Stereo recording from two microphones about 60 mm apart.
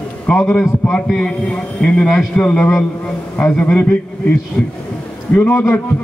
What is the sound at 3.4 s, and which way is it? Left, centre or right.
Speech, left.